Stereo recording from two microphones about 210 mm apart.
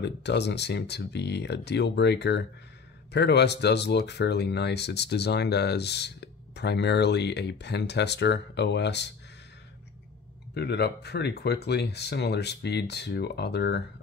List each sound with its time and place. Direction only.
0.0 s speech: 55° left (ahead or behind)
10.5 s speech: 50° left (ahead or behind)